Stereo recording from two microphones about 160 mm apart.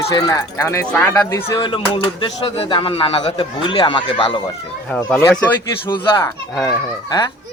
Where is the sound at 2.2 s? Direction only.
35° left (ahead or behind).